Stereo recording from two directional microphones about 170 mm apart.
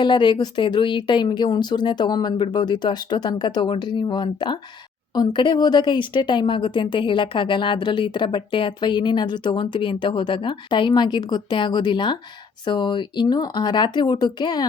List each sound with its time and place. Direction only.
0.0 s a woman's voice: 25° left (ahead or behind)